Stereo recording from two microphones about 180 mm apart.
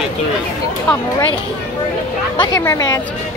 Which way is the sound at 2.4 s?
15° left (ahead or behind).